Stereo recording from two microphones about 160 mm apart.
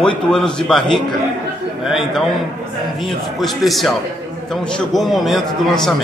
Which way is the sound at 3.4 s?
Centre (ahead or behind).